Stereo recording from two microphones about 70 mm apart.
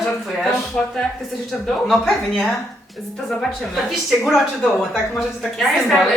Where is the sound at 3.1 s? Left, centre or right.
Centre.